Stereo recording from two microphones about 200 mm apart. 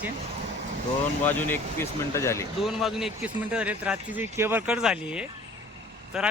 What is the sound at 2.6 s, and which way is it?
Speech, centre (ahead or behind).